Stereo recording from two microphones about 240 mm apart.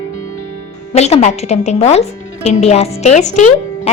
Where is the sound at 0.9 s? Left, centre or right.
Left.